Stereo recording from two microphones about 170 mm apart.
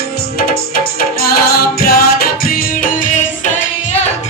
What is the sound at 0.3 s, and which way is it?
Music, 60° left (ahead or behind).